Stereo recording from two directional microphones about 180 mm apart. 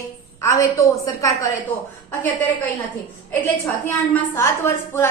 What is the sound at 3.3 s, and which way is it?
A woman's voice, 10° left (ahead or behind).